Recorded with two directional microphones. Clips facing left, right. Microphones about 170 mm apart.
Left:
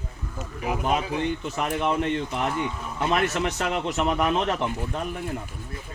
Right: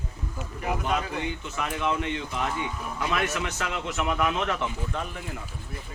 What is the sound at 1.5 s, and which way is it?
Speech, 35° left (ahead or behind).